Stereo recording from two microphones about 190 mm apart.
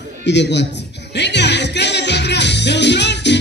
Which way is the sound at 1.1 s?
65° left (ahead or behind).